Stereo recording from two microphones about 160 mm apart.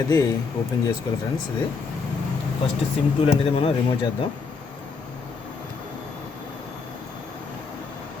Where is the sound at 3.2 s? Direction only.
40° left (ahead or behind).